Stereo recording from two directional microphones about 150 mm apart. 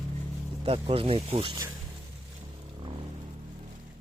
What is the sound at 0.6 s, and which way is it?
Speech, 40° right (ahead or behind).